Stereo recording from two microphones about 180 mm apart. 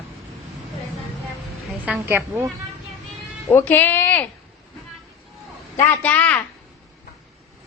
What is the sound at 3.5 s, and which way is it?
Speech, 10° left (ahead or behind).